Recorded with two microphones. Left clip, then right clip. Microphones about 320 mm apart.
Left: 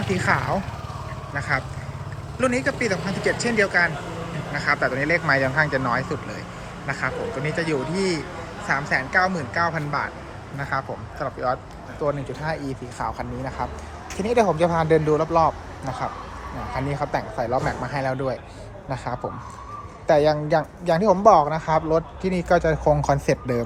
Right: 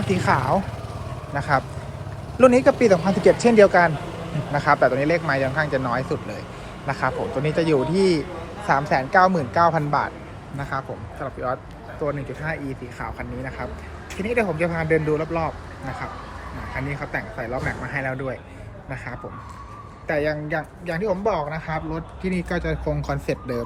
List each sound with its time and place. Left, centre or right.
0.2 s speech: centre
7.6 s speech: right
9.1 s speech: centre
13.0 s speech: centre
16.7 s speech: centre
20.1 s speech: centre